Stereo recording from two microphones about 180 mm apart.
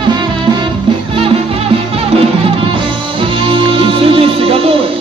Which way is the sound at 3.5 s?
30° right (ahead or behind).